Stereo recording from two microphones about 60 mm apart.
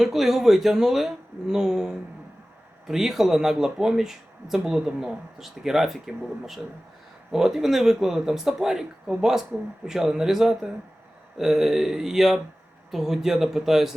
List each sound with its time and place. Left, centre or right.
0.0 s speech: centre